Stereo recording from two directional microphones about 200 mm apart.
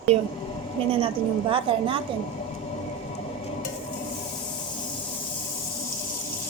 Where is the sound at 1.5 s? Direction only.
25° right (ahead or behind).